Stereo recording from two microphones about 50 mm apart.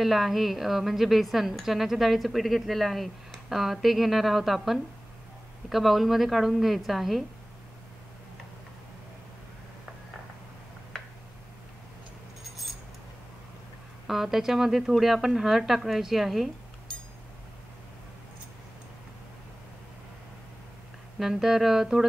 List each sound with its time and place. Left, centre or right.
0.0 s a woman's voice: centre
14.0 s a woman's voice: centre
16.9 s a sound: centre
21.2 s humming: centre